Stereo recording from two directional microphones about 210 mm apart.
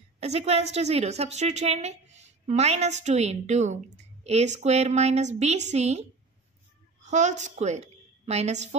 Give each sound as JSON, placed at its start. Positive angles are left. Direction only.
{"t": 0.2, "sound": "a woman's voice", "side_deg": -30}